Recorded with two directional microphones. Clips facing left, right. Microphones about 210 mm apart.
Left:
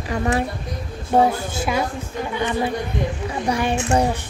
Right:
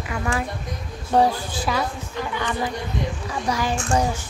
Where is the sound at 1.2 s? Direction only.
25° left (ahead or behind).